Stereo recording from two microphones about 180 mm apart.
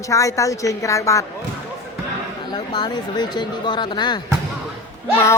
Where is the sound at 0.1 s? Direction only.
15° left (ahead or behind).